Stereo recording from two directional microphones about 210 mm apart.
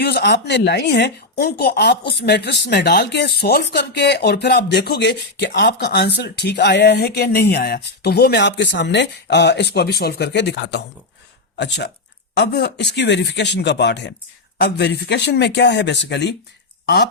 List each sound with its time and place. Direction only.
0.0 s a woman's voice: 50° left (ahead or behind)